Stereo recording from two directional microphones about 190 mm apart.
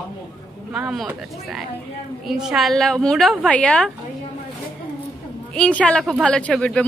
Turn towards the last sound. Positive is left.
turn(degrees=5)  # may be behind; listen again after turning